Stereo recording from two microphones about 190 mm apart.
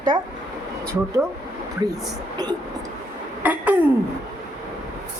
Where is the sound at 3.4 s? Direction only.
10° right (ahead or behind).